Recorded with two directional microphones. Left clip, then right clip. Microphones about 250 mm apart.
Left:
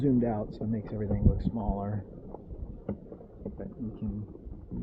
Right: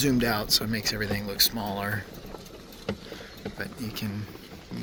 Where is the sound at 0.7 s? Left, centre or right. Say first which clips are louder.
Right 7 dB; centre.